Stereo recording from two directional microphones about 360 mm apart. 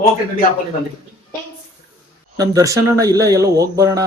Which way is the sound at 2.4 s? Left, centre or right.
Centre.